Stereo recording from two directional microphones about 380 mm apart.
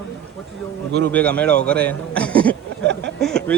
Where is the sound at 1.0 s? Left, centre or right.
Centre.